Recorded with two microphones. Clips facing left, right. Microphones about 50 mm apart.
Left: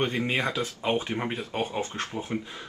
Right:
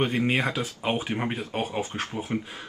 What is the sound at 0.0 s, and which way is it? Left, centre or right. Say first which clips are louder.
Speech: right 2 dB; centre.